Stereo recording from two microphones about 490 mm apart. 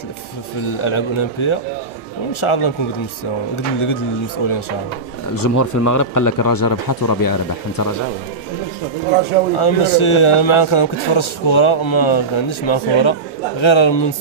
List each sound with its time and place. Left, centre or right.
0.7 s a man's voice: left
5.3 s speech: left
9.6 s a man's voice: left